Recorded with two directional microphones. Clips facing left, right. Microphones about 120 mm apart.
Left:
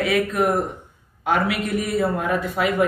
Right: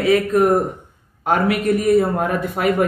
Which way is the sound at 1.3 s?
45° right (ahead or behind).